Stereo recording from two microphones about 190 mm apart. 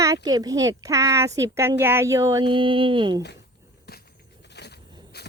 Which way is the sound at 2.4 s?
25° right (ahead or behind).